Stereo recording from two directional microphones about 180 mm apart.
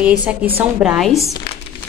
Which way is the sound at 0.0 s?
5° right (ahead or behind).